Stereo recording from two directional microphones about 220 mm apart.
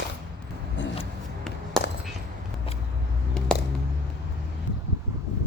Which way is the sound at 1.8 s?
Centre (ahead or behind).